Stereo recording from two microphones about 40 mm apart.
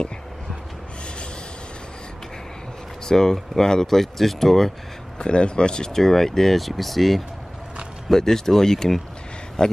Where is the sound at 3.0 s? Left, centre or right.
Centre.